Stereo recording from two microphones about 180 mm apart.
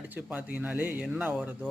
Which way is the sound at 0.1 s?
10° right (ahead or behind).